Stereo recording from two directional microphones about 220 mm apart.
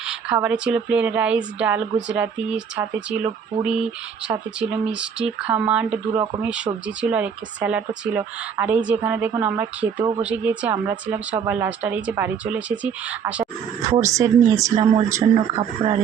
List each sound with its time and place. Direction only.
0.1 s speech: 5° right (ahead or behind)
4.9 s speech: 5° right (ahead or behind)
10.0 s speech: 20° right (ahead or behind)
10.2 s speech: 5° right (ahead or behind)